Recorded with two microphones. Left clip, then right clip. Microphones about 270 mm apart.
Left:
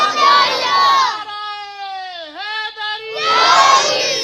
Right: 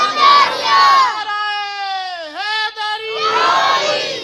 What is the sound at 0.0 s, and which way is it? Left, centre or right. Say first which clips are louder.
Crowd: right 1 dB; centre.